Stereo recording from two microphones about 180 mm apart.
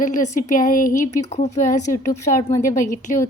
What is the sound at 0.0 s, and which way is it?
Speech, 50° left (ahead or behind).